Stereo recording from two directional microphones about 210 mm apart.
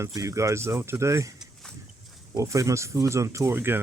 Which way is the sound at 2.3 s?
15° right (ahead or behind).